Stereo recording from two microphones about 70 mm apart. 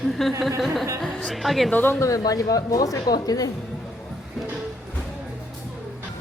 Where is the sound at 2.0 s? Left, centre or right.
Left.